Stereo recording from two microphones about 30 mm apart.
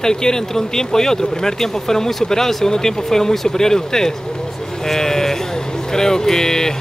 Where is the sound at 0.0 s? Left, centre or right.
Left.